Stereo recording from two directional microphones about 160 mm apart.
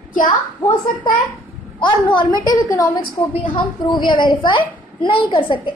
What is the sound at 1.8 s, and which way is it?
A woman's voice, 30° left (ahead or behind).